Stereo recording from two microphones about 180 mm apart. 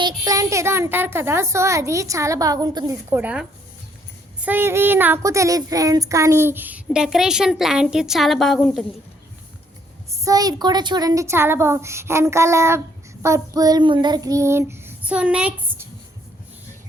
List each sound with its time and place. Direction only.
0.0 s speech: 20° right (ahead or behind)
3.2 s speech: 5° right (ahead or behind)
10.1 s speech: 20° right (ahead or behind)
13.2 s child singing: 20° right (ahead or behind)